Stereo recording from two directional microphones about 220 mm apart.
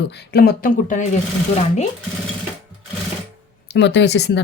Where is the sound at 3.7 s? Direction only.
50° left (ahead or behind).